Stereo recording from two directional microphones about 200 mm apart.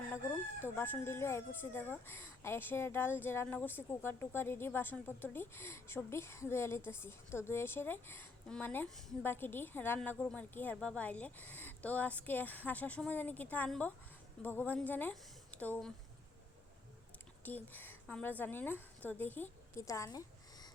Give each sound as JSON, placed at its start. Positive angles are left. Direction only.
{"t": 0.1, "sound": "crowing", "side_deg": 10}
{"t": 17.4, "sound": "a woman's voice", "side_deg": 10}